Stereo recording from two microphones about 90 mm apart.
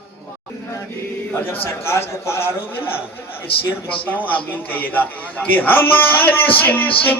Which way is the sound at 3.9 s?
75° left (ahead or behind).